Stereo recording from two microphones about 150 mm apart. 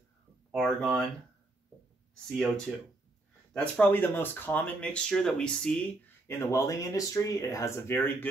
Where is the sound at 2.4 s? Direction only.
5° left (ahead or behind).